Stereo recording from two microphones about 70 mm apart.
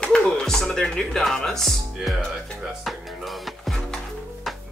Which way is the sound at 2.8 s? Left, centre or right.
Centre.